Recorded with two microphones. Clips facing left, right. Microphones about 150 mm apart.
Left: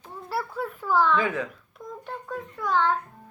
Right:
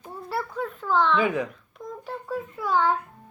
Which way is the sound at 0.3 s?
5° left (ahead or behind).